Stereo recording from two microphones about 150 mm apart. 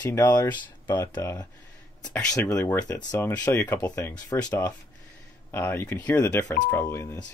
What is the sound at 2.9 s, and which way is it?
Speech, 25° left (ahead or behind).